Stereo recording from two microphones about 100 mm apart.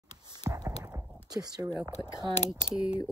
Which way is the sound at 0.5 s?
30° right (ahead or behind).